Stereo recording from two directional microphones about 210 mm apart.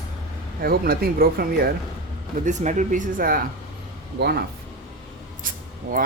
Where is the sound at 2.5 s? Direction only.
35° right (ahead or behind).